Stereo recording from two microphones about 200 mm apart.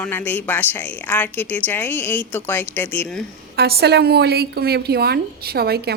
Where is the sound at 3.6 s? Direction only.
55° right (ahead or behind).